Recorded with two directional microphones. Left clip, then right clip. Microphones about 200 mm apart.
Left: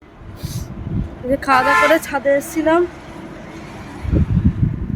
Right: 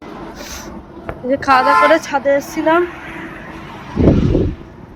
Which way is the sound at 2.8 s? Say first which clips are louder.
Right 3 dB; 65° left (ahead or behind).